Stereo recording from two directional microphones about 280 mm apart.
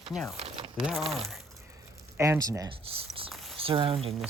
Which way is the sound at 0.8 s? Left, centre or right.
Centre.